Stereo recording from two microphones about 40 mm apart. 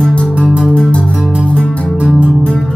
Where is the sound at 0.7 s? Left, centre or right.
Left.